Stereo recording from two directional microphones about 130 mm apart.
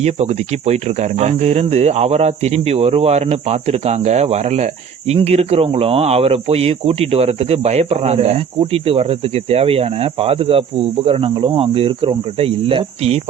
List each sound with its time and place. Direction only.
0.0 s speech: 55° right (ahead or behind)